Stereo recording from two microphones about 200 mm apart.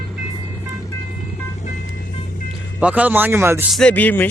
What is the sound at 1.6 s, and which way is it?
Vehicle, 40° left (ahead or behind).